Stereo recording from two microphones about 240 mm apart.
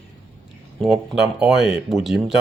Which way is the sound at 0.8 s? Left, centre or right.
Centre.